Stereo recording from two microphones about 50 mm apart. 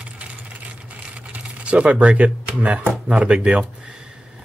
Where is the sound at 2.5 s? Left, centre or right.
Right.